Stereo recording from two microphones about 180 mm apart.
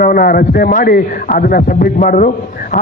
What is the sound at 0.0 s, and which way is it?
A man's voice, 50° left (ahead or behind).